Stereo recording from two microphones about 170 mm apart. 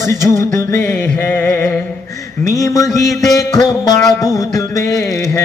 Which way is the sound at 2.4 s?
20° left (ahead or behind).